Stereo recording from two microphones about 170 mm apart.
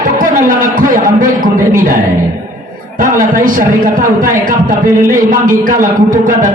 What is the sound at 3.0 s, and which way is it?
A man's voice, 55° right (ahead or behind).